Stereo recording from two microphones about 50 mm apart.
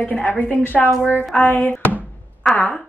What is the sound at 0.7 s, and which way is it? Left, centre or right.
Speech, centre.